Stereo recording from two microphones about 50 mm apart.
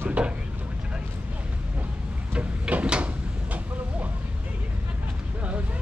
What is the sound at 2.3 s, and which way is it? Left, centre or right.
Drawer open or close, right.